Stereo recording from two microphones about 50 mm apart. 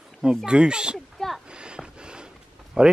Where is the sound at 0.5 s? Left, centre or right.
Centre.